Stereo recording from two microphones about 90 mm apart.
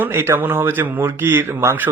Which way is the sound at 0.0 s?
30° right (ahead or behind).